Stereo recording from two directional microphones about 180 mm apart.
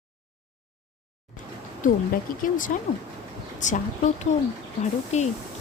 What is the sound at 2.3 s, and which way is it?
Speech, 50° left (ahead or behind).